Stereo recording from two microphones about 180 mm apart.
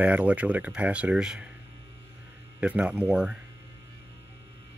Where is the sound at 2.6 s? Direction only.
5° right (ahead or behind).